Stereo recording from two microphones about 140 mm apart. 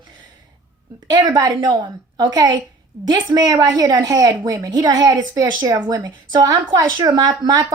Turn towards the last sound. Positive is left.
turn(degrees=-30)  # may be behind; listen again after turning